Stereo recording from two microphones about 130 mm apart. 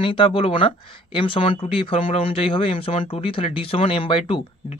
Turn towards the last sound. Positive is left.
turn(degrees=40)  # may be behind; listen again after turning